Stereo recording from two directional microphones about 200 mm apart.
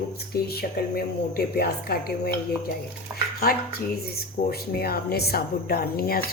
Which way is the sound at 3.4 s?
50° left (ahead or behind).